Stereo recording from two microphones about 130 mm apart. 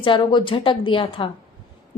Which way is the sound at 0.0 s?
40° left (ahead or behind).